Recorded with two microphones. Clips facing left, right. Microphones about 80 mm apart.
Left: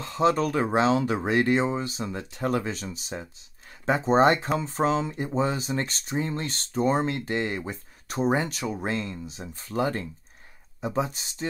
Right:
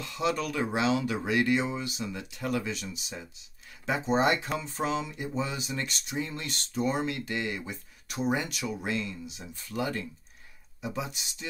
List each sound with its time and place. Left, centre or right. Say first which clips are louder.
0.0 s speech: left 7 dB; left